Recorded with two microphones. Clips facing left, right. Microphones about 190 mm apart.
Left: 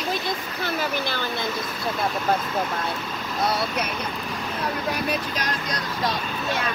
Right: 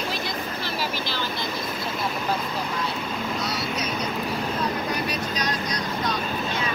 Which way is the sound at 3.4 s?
55° left (ahead or behind).